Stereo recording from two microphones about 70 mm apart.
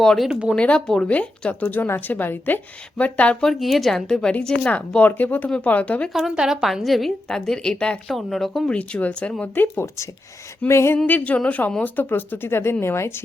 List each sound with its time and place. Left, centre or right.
0.0 s speech: centre
0.3 s speech: centre
0.5 s a woman's voice: centre
3.4 s a woman's voice: centre
6.1 s a woman's voice: centre
8.7 s a woman's voice: centre
9.4 s a woman's voice: left
10.7 s speech: left
10.9 s a woman's voice: left